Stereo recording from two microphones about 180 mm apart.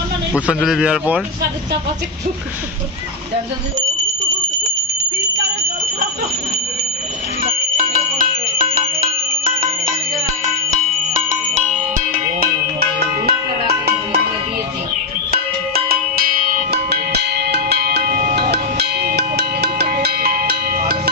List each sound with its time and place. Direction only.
0.3 s speech: 5° right (ahead or behind)
7.8 s music: 50° right (ahead or behind)
10.4 s music: 45° right (ahead or behind)
12.4 s music: 60° right (ahead or behind)
15.7 s music: 55° right (ahead or behind)